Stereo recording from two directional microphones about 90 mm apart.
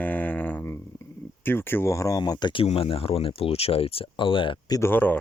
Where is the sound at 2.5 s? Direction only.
90° left; by 4.6 s 70° left (ahead or behind).